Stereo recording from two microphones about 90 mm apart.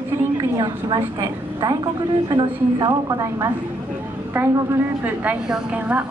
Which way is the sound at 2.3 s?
55° right (ahead or behind).